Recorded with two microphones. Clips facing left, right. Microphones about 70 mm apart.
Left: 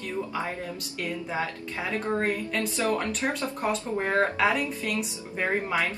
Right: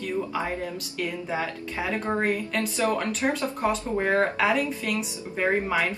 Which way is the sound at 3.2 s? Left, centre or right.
Centre.